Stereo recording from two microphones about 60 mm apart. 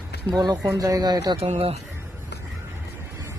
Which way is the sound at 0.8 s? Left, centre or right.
Right.